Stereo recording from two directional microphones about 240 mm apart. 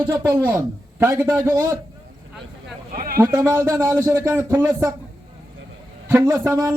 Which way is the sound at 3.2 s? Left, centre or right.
Centre.